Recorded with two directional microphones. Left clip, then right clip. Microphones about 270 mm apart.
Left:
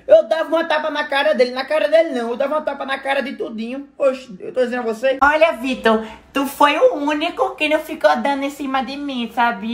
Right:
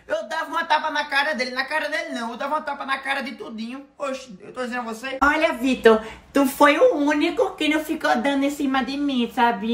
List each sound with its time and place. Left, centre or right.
0.1 s speech: centre